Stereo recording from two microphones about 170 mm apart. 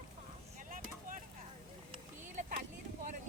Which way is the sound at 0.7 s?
50° right (ahead or behind).